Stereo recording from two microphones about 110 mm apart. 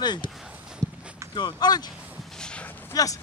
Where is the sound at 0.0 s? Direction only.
40° left (ahead or behind).